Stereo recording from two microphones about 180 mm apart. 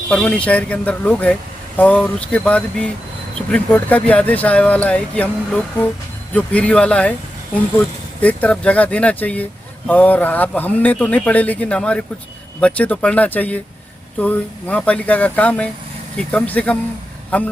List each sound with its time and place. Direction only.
0.1 s speech: 5° left (ahead or behind)
8.2 s speech: 10° left (ahead or behind)